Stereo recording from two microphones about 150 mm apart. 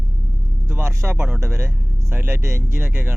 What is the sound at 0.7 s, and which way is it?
Speech, 15° right (ahead or behind).